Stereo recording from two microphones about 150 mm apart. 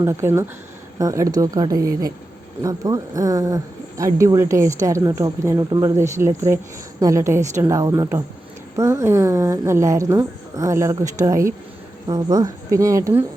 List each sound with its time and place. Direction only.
0.0 s speech: 20° right (ahead or behind)